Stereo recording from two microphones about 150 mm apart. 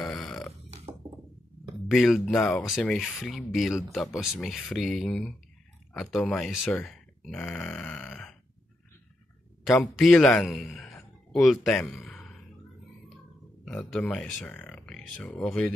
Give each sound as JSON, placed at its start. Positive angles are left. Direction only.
{"t": 0.0, "sound": "burping", "side_deg": 5}
{"t": 1.0, "sound": "a sound", "side_deg": -50}
{"t": 1.9, "sound": "speech", "side_deg": 0}
{"t": 9.7, "sound": "a man's voice", "side_deg": 0}
{"t": 13.7, "sound": "speech", "side_deg": 5}